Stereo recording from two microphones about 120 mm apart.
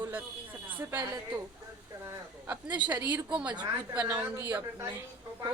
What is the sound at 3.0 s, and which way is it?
Speech, 10° right (ahead or behind).